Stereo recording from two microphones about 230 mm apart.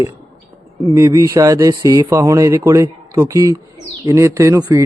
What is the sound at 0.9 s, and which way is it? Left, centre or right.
Speech, centre.